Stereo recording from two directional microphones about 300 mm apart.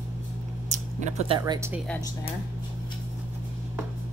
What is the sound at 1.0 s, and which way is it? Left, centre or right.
Speech, right.